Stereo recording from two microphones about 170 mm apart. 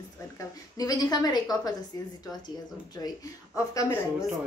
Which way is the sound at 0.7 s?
20° left (ahead or behind).